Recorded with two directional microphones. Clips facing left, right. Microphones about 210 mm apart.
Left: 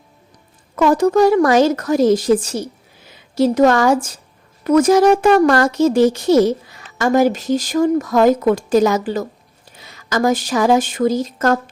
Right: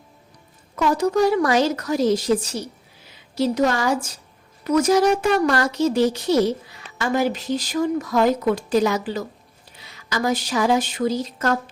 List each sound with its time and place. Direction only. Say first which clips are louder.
0.8 s speech: left 6 dB; 50° left (ahead or behind)